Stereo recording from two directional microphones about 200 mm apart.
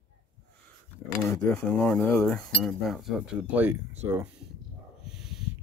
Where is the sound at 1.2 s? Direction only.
10° left (ahead or behind); by 3.8 s 10° right (ahead or behind).